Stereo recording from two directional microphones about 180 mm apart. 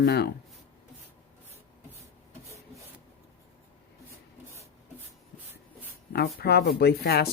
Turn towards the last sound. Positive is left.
turn(degrees=65)  # may be behind; listen again after turning